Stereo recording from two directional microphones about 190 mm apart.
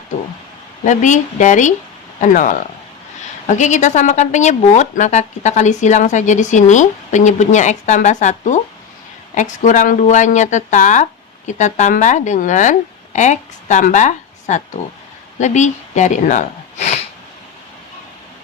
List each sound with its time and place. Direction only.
0.9 s speech: 40° left (ahead or behind)